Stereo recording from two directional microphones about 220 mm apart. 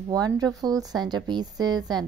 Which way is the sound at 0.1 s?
15° right (ahead or behind).